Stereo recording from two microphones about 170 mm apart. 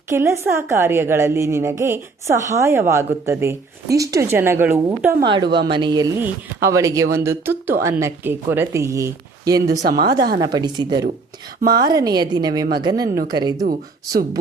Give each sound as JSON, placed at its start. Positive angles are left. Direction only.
{"t": 0.1, "sound": "speech", "side_deg": -15}
{"t": 5.2, "sound": "a woman's voice", "side_deg": -30}
{"t": 5.5, "sound": "a woman's voice", "side_deg": -85}
{"t": 5.7, "sound": "a woman's voice", "side_deg": -25}
{"t": 9.8, "sound": "speech", "side_deg": -60}
{"t": 10.4, "sound": "a woman's voice", "side_deg": -25}
{"t": 13.7, "sound": "speech", "side_deg": -60}